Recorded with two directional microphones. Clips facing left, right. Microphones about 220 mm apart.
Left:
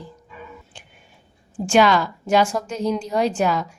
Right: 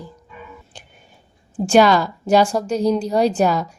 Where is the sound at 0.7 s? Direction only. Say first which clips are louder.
Right 3 dB; 40° right (ahead or behind).